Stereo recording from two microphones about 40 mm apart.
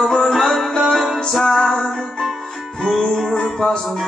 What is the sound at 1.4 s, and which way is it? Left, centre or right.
Music, centre.